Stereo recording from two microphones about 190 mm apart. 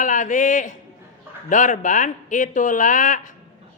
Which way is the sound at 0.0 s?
40° left (ahead or behind).